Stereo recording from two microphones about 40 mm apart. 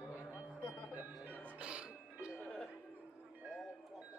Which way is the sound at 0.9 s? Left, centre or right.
Right.